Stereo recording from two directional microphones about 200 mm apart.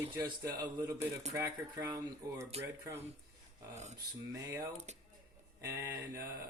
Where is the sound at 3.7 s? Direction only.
35° right (ahead or behind).